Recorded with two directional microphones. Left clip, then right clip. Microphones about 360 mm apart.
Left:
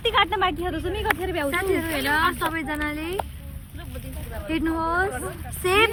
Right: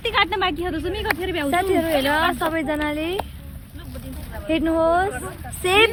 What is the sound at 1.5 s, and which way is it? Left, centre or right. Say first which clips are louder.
Speech: right 9 dB; centre.